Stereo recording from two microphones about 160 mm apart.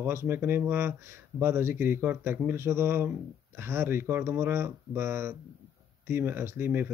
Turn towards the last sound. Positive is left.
turn(degrees=-15)  # may be behind; listen again after turning